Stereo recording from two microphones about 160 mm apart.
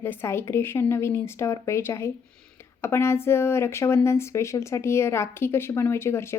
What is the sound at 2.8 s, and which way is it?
A woman's voice, 15° left (ahead or behind).